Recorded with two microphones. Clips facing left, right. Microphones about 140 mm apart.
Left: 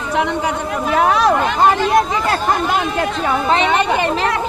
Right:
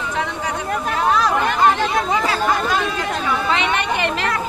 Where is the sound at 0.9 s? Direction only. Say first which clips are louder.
Left 5 dB; 65° left (ahead or behind).